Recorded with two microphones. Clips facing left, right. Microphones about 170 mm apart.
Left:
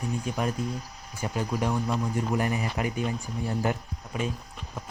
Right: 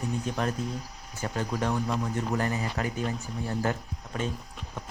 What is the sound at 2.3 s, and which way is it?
Speech, 15° left (ahead or behind).